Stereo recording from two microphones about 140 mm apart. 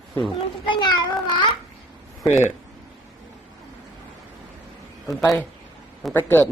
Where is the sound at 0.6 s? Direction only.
35° left (ahead or behind).